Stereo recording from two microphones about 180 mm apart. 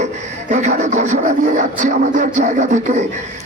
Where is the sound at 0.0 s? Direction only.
40° right (ahead or behind).